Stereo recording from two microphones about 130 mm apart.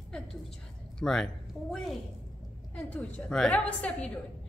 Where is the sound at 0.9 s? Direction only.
5° left (ahead or behind).